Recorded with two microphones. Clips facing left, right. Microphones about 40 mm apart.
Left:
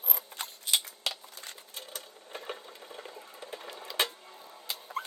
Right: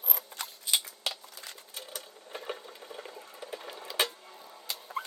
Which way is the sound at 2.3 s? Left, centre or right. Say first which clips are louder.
Right 1 dB; centre.